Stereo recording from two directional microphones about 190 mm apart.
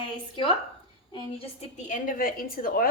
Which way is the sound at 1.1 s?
35° left (ahead or behind).